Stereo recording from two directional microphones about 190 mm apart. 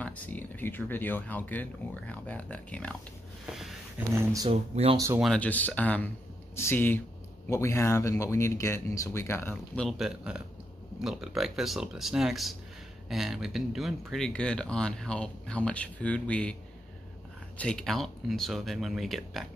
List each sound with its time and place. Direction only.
0.0 s speech: 10° left (ahead or behind)
4.1 s speech: 15° right (ahead or behind)
4.5 s speech: 30° right (ahead or behind)
4.9 s speech: 15° right (ahead or behind)
5.2 s speech: 5° left (ahead or behind)
17.6 s speech: 5° left (ahead or behind)